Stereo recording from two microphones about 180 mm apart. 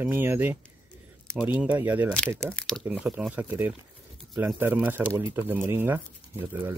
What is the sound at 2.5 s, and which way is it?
Speech, 5° left (ahead or behind).